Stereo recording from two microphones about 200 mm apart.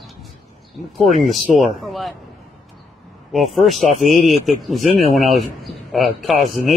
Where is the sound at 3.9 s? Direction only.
40° left (ahead or behind).